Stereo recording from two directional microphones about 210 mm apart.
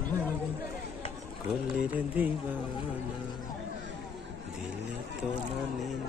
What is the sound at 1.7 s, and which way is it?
Speech, 5° right (ahead or behind).